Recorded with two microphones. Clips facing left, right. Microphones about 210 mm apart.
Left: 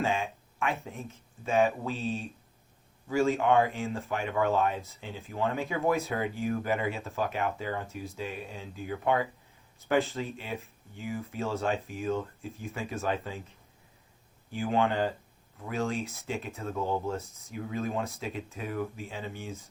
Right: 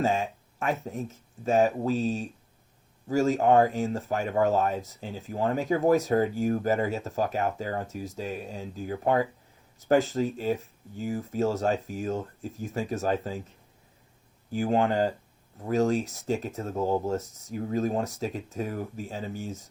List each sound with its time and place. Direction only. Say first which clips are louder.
0.0 s speech: right 4 dB; 40° right (ahead or behind)
14.5 s speech: right 3 dB; 40° right (ahead or behind)